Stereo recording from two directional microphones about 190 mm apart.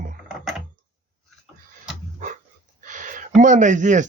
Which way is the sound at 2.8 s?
40° right (ahead or behind).